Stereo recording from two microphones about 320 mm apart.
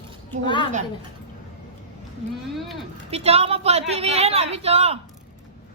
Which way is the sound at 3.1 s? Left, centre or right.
Centre.